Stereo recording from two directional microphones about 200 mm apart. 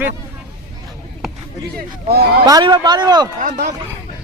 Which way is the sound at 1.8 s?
50° right (ahead or behind).